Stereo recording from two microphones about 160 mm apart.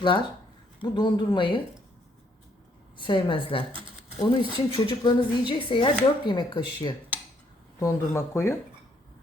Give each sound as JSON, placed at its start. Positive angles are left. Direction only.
{"t": 0.8, "sound": "speech", "side_deg": 30}
{"t": 3.0, "sound": "speech", "side_deg": 30}
{"t": 7.8, "sound": "speech", "side_deg": 15}